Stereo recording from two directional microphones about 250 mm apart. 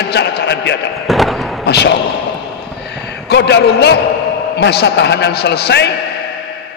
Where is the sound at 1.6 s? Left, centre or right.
Left.